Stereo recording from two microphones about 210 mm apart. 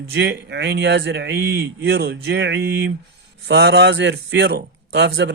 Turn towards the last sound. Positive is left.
turn(degrees=-55)  # may be behind; listen again after turning